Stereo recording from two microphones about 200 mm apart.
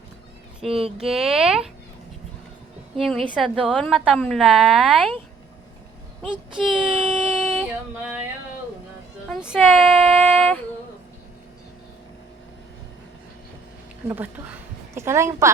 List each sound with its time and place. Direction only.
0.7 s speech: 30° right (ahead or behind)
0.9 s a woman's voice: centre (ahead or behind)
3.0 s a woman's voice: centre (ahead or behind)
6.2 s child singing: 5° right (ahead or behind)
9.3 s a woman's voice: 5° right (ahead or behind)
14.1 s a woman's voice: 10° right (ahead or behind)